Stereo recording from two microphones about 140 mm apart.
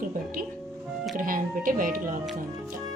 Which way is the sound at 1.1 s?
80° right.